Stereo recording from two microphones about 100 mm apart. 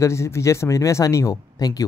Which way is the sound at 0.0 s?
30° left (ahead or behind).